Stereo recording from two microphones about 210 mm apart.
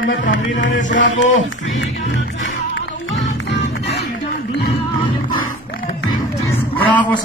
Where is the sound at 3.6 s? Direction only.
50° left (ahead or behind).